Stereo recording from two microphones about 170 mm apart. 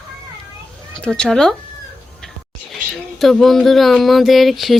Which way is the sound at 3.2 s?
Centre (ahead or behind).